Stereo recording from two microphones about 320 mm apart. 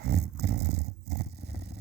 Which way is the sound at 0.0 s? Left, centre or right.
Right.